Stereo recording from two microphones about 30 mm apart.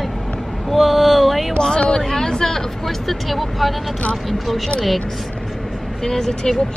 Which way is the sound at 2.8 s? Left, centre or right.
Centre.